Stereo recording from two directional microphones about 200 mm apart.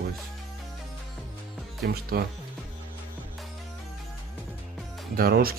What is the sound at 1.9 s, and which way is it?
Speech, 50° right (ahead or behind).